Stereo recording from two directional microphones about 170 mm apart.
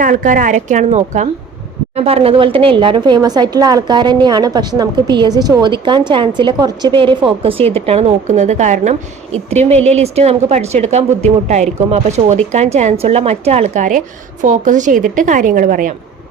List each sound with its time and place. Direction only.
0.0 s a woman's voice: 50° right (ahead or behind)